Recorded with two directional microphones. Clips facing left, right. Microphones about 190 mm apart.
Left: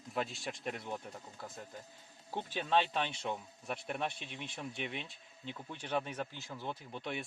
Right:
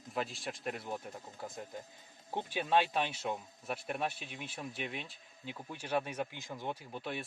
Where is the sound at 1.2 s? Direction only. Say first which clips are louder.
Right 3 dB; 20° right (ahead or behind).